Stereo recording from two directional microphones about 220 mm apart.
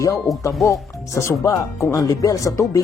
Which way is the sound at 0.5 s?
Centre (ahead or behind).